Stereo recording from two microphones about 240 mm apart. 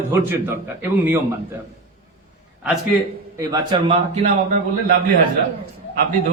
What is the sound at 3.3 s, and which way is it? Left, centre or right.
Speech, centre.